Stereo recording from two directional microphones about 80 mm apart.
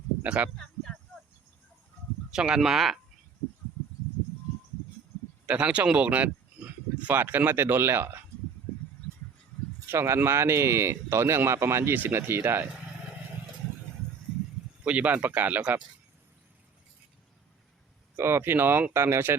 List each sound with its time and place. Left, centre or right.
0.2 s speech: centre
0.5 s a sound: centre
2.3 s speech: centre
5.5 s speech: centre
9.9 s speech: right
14.8 s speech: centre
18.2 s speech: right